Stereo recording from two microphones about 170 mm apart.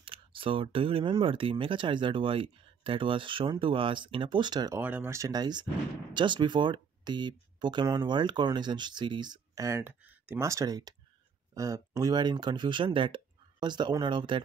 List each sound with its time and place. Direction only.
0.0 s speech: 30° right (ahead or behind)
4.8 s speech: 10° right (ahead or behind); by 14.4 s 30° right (ahead or behind)